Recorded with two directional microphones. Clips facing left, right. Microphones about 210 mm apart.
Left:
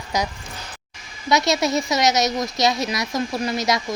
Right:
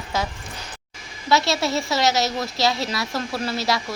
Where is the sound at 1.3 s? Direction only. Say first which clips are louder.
Left 2 dB; 20° left (ahead or behind).